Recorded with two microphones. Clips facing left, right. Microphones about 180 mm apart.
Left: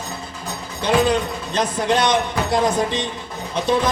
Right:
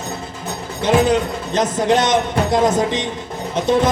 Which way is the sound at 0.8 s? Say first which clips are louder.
Right 3 dB; 20° right (ahead or behind).